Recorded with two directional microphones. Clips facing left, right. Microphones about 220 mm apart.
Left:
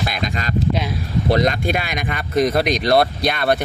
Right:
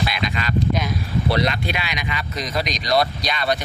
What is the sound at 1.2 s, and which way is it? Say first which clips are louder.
Speech: left 5 dB; 45° left (ahead or behind).